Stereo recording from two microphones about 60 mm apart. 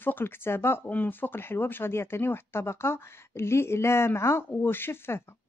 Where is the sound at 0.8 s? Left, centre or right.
Left.